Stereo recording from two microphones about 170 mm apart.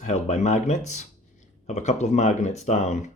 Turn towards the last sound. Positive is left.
turn(degrees=40)  # may be behind; listen again after turning